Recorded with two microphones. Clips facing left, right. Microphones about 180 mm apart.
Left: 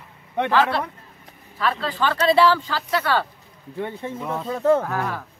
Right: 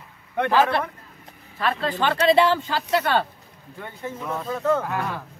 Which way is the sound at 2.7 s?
20° right (ahead or behind).